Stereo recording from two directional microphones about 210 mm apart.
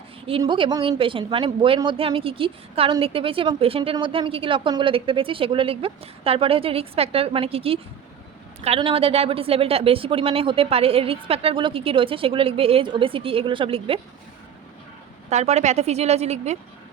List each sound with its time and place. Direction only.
0.3 s a woman's voice: 25° right (ahead or behind)
15.3 s a woman's voice: 30° right (ahead or behind)